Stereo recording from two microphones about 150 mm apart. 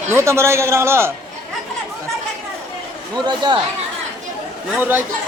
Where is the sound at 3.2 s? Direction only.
30° right (ahead or behind).